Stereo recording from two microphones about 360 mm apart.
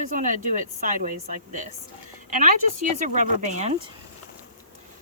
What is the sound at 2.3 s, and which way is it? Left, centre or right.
A woman's voice, right.